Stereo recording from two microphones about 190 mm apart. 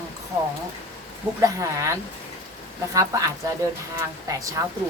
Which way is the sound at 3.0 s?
20° right (ahead or behind).